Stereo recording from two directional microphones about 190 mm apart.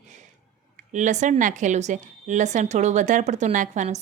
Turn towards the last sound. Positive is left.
turn(degrees=-40)  # may be behind; listen again after turning